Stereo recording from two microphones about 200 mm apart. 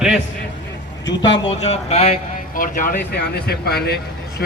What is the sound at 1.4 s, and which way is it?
Speech, 30° left (ahead or behind).